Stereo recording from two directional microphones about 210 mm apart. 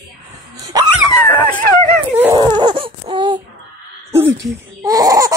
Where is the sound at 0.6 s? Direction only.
20° right (ahead or behind).